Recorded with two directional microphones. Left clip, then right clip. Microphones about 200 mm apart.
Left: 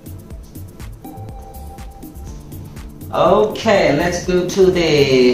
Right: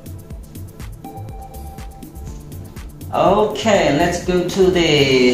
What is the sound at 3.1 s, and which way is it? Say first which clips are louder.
Speech: left 1 dB; 20° right (ahead or behind).